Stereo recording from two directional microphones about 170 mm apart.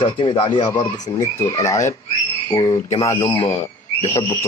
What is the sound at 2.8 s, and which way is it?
Speech, 40° left (ahead or behind).